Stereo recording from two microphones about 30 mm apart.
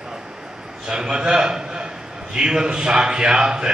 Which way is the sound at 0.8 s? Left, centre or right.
Right.